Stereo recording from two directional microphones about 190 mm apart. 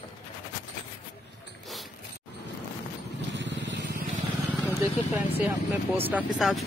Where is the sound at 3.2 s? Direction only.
70° right (ahead or behind).